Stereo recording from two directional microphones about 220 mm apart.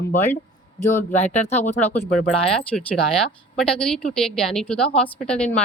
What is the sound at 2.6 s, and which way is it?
Speech, 5° left (ahead or behind).